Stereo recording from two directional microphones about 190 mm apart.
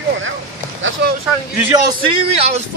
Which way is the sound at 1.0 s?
60° right (ahead or behind).